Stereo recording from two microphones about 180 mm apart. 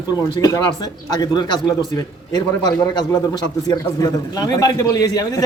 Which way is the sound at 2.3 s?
20° left (ahead or behind).